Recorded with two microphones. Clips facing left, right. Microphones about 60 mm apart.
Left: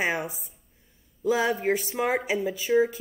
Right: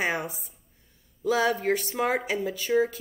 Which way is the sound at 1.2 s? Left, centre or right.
Centre.